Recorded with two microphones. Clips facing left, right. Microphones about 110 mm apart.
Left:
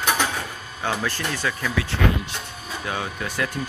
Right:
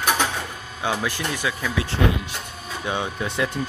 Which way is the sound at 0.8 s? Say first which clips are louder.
Right 1 dB; 10° right (ahead or behind).